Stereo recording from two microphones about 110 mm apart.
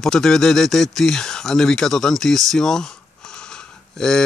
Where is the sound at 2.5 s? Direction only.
5° left (ahead or behind).